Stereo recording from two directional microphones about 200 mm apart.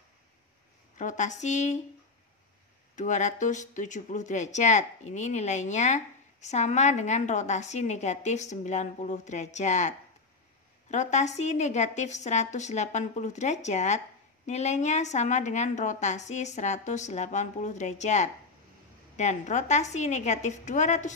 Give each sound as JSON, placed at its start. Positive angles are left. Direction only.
{"t": 0.9, "sound": "a woman's voice", "side_deg": 40}
{"t": 3.0, "sound": "a woman's voice", "side_deg": 35}